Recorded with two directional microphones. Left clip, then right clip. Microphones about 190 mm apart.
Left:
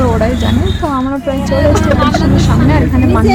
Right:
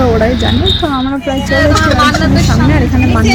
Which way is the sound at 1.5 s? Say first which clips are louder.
Right 2 dB; centre (ahead or behind).